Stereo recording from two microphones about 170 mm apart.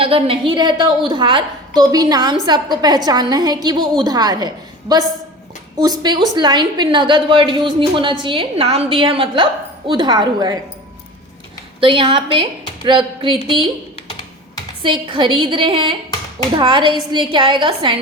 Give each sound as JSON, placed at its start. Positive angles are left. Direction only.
{"t": 0.0, "sound": "a woman's voice", "side_deg": -35}
{"t": 11.8, "sound": "a woman's voice", "side_deg": -30}
{"t": 13.9, "sound": "typing", "side_deg": 25}
{"t": 14.8, "sound": "a woman's voice", "side_deg": -30}